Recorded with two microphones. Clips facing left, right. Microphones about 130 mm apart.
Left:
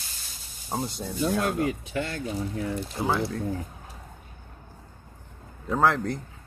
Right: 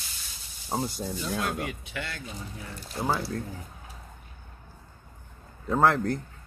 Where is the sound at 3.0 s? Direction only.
5° right (ahead or behind).